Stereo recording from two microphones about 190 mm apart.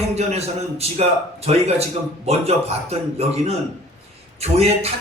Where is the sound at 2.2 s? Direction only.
30° right (ahead or behind).